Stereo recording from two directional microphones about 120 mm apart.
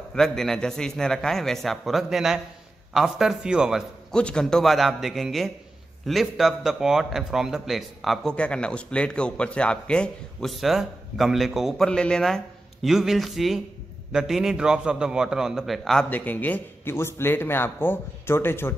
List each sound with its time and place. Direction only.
0.1 s a man's voice: 5° left (ahead or behind)
4.1 s a man's voice: 5° left (ahead or behind)
16.1 s a man's voice: 15° left (ahead or behind)